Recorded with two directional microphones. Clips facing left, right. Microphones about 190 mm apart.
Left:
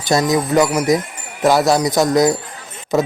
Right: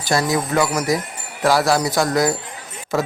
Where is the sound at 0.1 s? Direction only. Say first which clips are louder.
Left 4 dB; 20° left (ahead or behind).